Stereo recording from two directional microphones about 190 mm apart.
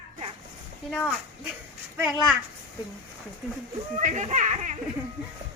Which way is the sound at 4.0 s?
40° right (ahead or behind).